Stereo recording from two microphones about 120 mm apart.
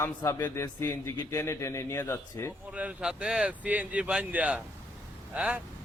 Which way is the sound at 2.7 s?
10° right (ahead or behind).